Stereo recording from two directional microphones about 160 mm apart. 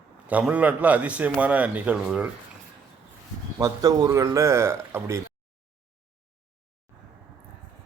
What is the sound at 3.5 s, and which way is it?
Speech, 20° right (ahead or behind).